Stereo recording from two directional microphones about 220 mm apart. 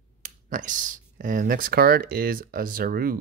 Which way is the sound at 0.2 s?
35° right (ahead or behind).